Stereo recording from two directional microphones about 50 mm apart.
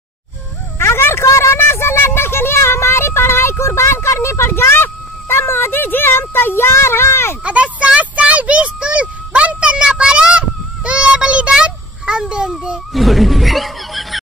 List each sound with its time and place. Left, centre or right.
0.7 s a sound: left
3.9 s speech: left
7.4 s a child's voice: right
12.9 s speech: centre